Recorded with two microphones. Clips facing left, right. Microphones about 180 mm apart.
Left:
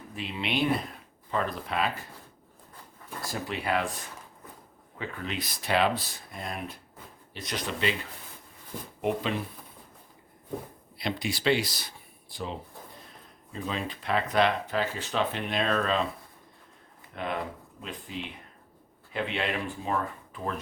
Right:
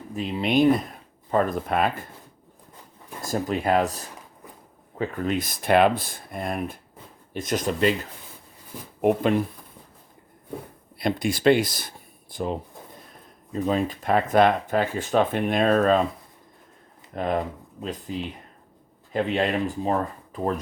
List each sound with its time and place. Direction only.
0.2 s speech: 40° right (ahead or behind)
3.2 s speech: 45° right (ahead or behind)
9.0 s speech: 50° right (ahead or behind)
10.9 s speech: 50° right (ahead or behind)
17.2 s speech: 40° right (ahead or behind)